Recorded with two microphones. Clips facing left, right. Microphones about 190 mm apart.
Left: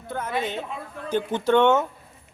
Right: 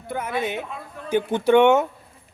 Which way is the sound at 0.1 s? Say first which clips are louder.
Right 2 dB; 10° right (ahead or behind).